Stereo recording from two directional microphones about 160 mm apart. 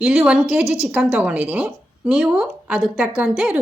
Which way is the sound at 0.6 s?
20° left (ahead or behind).